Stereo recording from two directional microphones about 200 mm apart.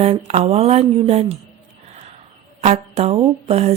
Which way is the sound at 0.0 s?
35° right (ahead or behind).